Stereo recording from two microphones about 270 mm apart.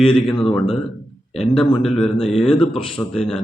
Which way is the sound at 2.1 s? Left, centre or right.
Left.